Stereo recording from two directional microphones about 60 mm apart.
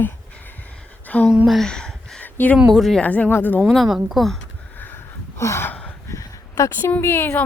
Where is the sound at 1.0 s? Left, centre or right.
Left.